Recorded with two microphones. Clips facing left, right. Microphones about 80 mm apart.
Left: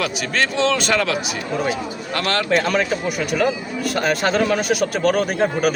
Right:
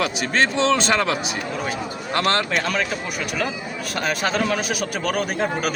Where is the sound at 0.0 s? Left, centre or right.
Right.